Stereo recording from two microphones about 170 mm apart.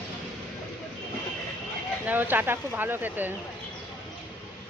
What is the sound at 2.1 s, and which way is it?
Speech, 10° right (ahead or behind).